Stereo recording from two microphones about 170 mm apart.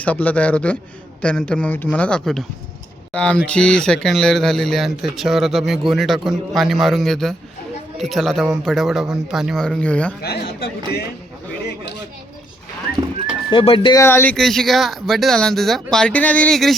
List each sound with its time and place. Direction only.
0.0 s speech: 10° left (ahead or behind)
10.2 s speech: 65° left (ahead or behind)
13.5 s speech: 30° left (ahead or behind)
14.0 s speech: 10° left (ahead or behind)